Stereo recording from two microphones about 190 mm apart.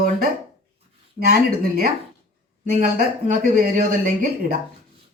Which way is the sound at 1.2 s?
50° right (ahead or behind).